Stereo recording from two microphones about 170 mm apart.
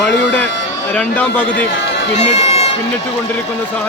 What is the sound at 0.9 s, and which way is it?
Speech, 10° left (ahead or behind).